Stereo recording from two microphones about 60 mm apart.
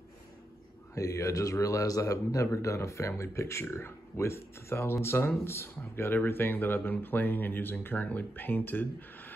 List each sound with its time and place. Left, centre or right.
0.9 s speech: left